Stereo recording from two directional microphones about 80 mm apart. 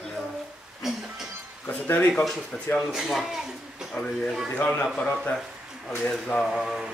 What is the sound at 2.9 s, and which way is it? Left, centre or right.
Speech, centre.